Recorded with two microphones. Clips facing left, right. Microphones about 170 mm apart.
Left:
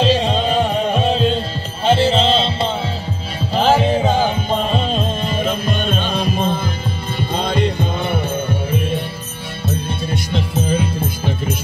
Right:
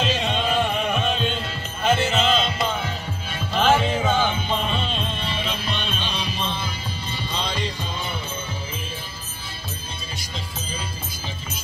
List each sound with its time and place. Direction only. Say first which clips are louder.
0.0 s music: left 8 dB; 35° left (ahead or behind); by 9.0 s 60° left (ahead or behind)
10.3 s music: left 15 dB; 60° left (ahead or behind)